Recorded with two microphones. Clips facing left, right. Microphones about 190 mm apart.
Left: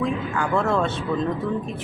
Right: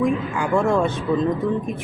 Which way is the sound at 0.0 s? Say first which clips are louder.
Right 3 dB; 15° right (ahead or behind).